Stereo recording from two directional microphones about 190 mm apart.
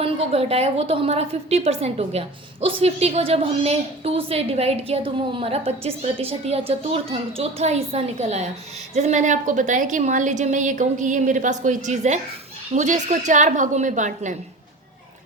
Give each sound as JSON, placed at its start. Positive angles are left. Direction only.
{"t": 0.0, "sound": "a woman's voice", "side_deg": -30}